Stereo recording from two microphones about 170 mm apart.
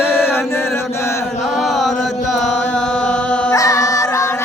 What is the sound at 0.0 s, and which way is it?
Chant, 15° left (ahead or behind).